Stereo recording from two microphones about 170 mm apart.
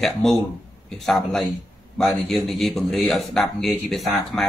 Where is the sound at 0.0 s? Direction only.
Centre (ahead or behind).